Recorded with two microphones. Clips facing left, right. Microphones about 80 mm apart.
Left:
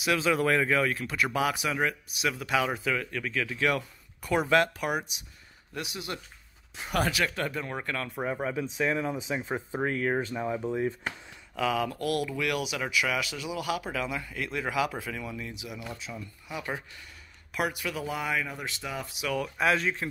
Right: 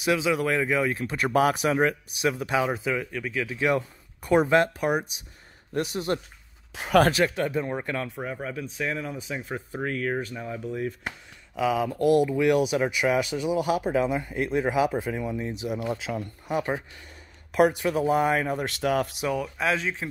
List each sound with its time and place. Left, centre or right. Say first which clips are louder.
0.2 s speech: right 1 dB; centre
0.9 s speech: right 5 dB; right
5.7 s speech: right 9 dB; right
6.7 s speech: right 9 dB; right
7.1 s speech: right 6 dB; right
7.3 s speech: right 5 dB; centre
8.2 s speech: left 2 dB; centre
9.4 s speech: left 1 dB; left
11.1 s speech: even; centre; by 16.0 s right
16.0 s speech: right 9 dB; right
17.5 s speech: right 10 dB; right
19.6 s speech: left 2 dB; centre